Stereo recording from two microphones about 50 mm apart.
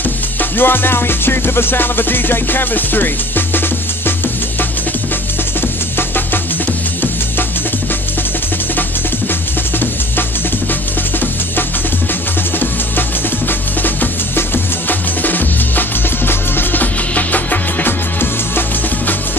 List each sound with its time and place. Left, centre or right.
0.0 s music: left
5.9 s music: left
9.3 s music: left
13.5 s music: left